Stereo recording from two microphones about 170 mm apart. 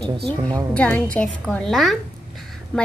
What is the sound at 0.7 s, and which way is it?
A woman's voice, 10° left (ahead or behind).